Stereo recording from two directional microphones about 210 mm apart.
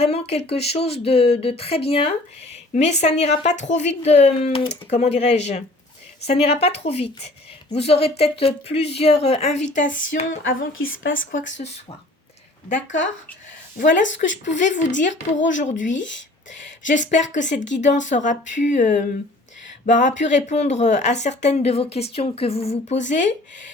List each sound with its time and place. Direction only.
0.0 s a woman's voice: 30° left (ahead or behind)
9.6 s speech: 60° left (ahead or behind)
9.8 s speech: 40° left (ahead or behind)
10.7 s speech: 70° left (ahead or behind)
11.5 s speech: 30° left (ahead or behind)
15.1 s speech: 60° left (ahead or behind)
15.5 s speech: 35° left (ahead or behind)
16.9 s speech: 35° left (ahead or behind)